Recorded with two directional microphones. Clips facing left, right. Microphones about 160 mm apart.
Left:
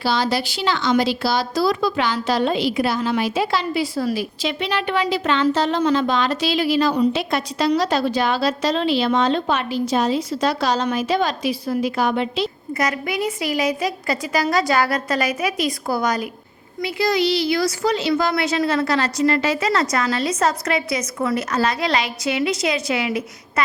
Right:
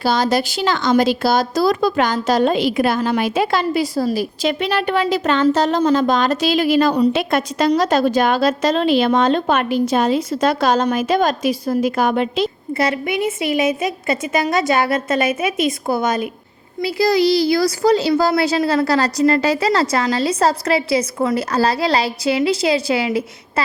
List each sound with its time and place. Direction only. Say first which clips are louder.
0.0 s speech: right 4 dB; 45° right (ahead or behind)
12.7 s a woman's voice: right 3 dB; 30° right (ahead or behind)
16.8 s a woman's voice: right 4 dB; 35° right (ahead or behind)